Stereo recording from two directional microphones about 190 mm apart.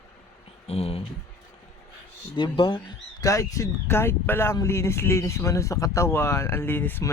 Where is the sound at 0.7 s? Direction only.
30° left (ahead or behind).